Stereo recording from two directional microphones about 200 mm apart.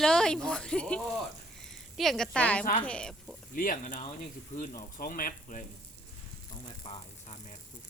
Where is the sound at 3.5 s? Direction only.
45° left (ahead or behind).